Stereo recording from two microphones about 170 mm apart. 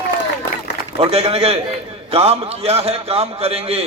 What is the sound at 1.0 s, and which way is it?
A man's voice, 35° right (ahead or behind).